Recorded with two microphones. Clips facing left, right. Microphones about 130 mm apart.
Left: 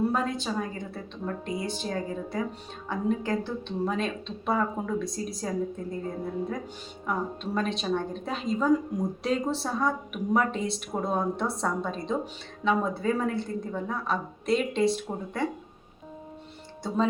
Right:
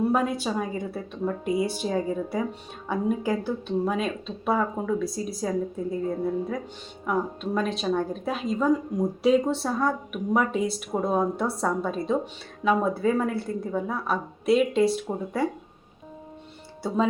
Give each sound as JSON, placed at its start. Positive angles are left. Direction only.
{"t": 0.1, "sound": "a woman's voice", "side_deg": -10}